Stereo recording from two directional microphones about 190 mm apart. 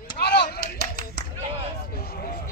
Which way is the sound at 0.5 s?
55° left (ahead or behind).